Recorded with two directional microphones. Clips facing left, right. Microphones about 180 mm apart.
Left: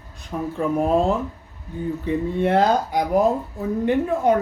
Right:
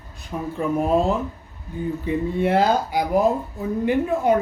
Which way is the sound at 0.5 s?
5° right (ahead or behind).